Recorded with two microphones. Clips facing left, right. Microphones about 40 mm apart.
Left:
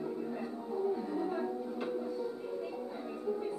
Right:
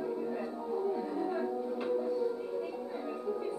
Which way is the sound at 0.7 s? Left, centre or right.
Centre.